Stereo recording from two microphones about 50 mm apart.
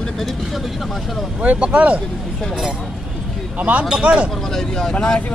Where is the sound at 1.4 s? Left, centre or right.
Right.